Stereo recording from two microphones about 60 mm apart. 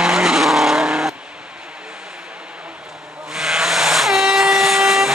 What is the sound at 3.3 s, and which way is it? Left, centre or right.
Vehicle, centre.